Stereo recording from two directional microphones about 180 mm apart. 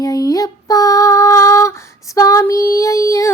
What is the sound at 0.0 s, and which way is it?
Female singing, 20° left (ahead or behind).